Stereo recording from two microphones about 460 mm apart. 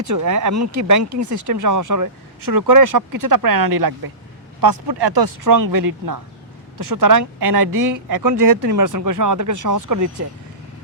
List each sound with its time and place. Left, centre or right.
0.0 s speech: right